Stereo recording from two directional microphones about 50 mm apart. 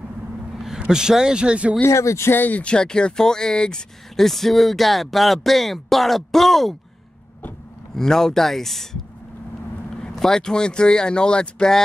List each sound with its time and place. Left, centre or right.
0.6 s speech: centre
1.9 s speech: left
2.3 s speech: left
2.6 s speech: centre
4.3 s speech: centre
7.9 s speech: centre
10.1 s speech: centre